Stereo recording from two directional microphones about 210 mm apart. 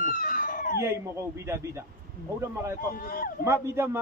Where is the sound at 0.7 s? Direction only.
10° right (ahead or behind).